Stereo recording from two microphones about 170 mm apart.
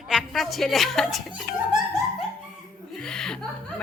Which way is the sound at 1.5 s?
60° left (ahead or behind).